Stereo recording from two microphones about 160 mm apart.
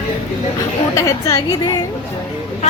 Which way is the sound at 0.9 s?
20° left (ahead or behind).